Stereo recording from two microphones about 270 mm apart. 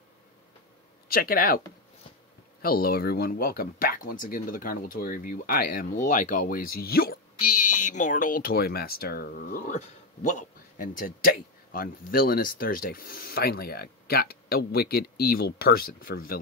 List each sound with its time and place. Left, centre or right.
1.0 s speech: left
2.6 s speech: left